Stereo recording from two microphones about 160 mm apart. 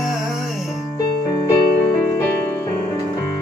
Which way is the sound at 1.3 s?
25° left (ahead or behind).